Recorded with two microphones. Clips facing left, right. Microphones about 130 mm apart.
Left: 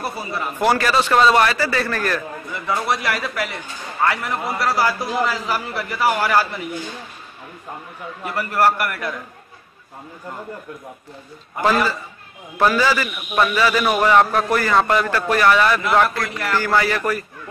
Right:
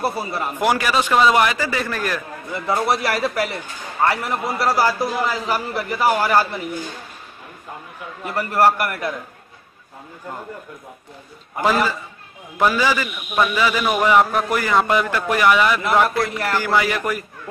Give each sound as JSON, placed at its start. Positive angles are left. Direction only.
{"t": 0.0, "sound": "a man's voice", "side_deg": -30}
{"t": 0.6, "sound": "a man's voice", "side_deg": -15}
{"t": 2.5, "sound": "a man's voice", "side_deg": -25}
{"t": 8.4, "sound": "a man's voice", "side_deg": -30}
{"t": 11.6, "sound": "a man's voice", "side_deg": -15}